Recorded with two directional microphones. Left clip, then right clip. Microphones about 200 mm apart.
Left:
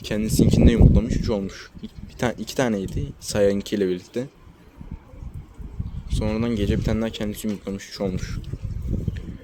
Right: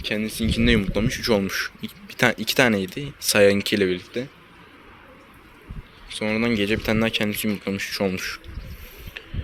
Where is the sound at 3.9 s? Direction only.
35° left (ahead or behind).